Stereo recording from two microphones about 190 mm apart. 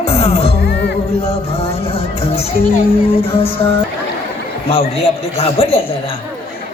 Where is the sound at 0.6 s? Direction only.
55° left (ahead or behind).